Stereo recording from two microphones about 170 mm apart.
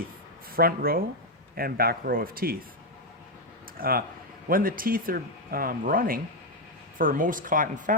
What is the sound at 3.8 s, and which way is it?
A woman's voice, 60° right (ahead or behind).